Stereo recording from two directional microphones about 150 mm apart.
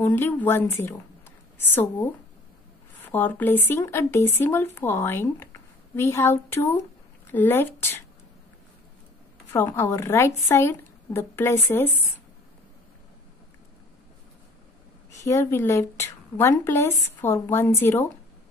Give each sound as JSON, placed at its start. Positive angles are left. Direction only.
{"t": 0.0, "sound": "a woman's voice", "side_deg": 15}
{"t": 9.5, "sound": "a woman's voice", "side_deg": 15}
{"t": 15.2, "sound": "a woman's voice", "side_deg": 20}